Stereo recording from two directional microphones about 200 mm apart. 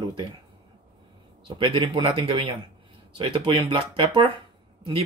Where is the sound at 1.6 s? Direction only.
25° right (ahead or behind).